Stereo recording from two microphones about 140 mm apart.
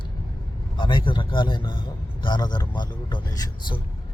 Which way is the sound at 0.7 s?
35° left (ahead or behind).